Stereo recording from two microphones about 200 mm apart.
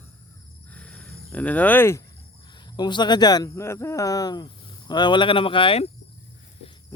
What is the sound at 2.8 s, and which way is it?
Speech, 20° left (ahead or behind).